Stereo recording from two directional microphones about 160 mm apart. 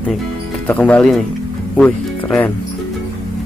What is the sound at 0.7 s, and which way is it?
Speech, 10° left (ahead or behind).